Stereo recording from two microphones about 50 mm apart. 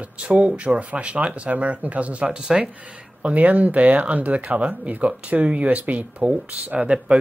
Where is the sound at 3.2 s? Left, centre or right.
Right.